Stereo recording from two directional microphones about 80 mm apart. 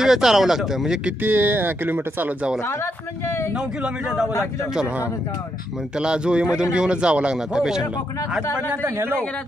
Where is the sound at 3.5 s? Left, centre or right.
Centre.